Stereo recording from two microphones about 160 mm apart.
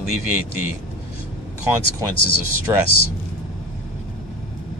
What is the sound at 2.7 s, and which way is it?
Speech, 20° right (ahead or behind).